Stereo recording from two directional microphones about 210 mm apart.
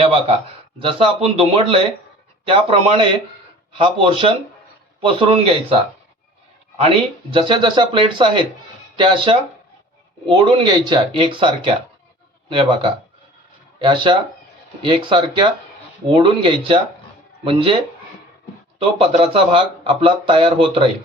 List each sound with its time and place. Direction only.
0.0 s speech: 25° right (ahead or behind)
7.3 s speech: 25° right (ahead or behind)
18.9 s speech: 25° right (ahead or behind)